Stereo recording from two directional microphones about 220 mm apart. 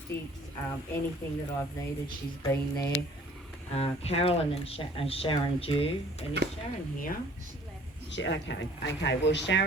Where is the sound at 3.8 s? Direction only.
25° left (ahead or behind).